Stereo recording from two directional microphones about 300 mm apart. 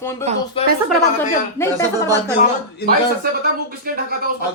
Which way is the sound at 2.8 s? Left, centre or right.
Left.